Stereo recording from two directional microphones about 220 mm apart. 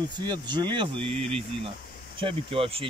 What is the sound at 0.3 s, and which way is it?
Speech, 20° right (ahead or behind).